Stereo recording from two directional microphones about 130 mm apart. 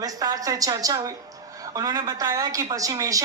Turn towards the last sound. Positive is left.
turn(degrees=-25)  # may be behind; listen again after turning